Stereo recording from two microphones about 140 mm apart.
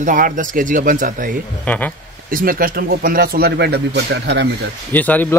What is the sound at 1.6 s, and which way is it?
Speech, 10° left (ahead or behind).